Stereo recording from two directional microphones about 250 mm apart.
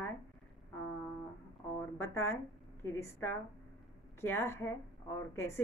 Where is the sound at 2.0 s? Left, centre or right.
Centre.